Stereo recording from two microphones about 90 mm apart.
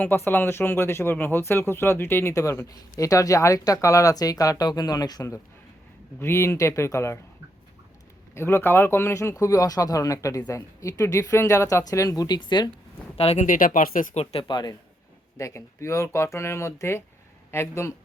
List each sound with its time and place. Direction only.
0.0 s speech: 20° left (ahead or behind); by 5.2 s 45° left (ahead or behind)
6.1 s speech: 30° left (ahead or behind)
8.4 s speech: 25° left (ahead or behind); by 12.4 s 45° left (ahead or behind)
12.4 s speech: 55° left (ahead or behind)
14.3 s speech: 60° left (ahead or behind)
15.4 s speech: 35° left (ahead or behind)